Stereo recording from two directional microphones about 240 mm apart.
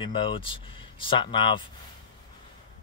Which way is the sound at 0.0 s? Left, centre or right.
Left.